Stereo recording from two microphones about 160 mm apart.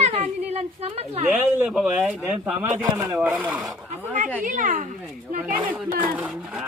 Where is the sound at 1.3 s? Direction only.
10° right (ahead or behind).